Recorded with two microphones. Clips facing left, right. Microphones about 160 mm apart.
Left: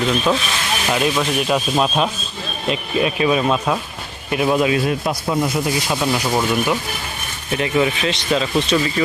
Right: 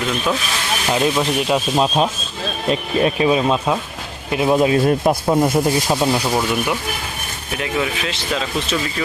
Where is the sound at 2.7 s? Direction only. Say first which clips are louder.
Right 2 dB; 35° right (ahead or behind).